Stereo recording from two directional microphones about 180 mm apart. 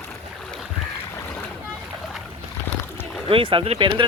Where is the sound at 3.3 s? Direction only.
30° right (ahead or behind).